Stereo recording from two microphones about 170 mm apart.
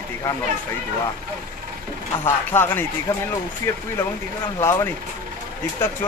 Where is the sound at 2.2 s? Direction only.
15° left (ahead or behind).